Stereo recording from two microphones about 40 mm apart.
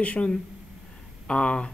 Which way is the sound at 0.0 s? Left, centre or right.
Left.